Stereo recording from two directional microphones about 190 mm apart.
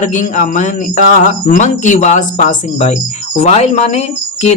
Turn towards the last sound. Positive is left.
turn(degrees=35)  # may be behind; listen again after turning